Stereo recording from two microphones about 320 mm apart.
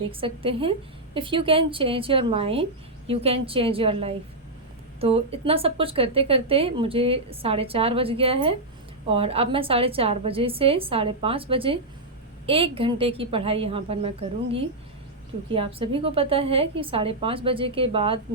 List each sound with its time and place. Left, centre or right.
0.1 s a woman's voice: centre